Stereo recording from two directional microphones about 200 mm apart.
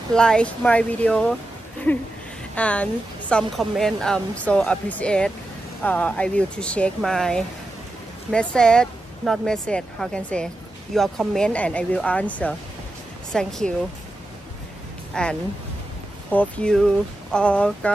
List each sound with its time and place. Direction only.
0.1 s speech: 5° left (ahead or behind)
2.5 s speech: 5° left (ahead or behind)
15.2 s speech: 5° left (ahead or behind)